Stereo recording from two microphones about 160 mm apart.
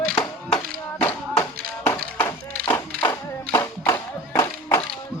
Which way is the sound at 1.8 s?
15° left (ahead or behind).